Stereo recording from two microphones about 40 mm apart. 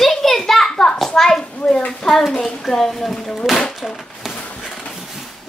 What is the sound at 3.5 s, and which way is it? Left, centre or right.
Speech, centre.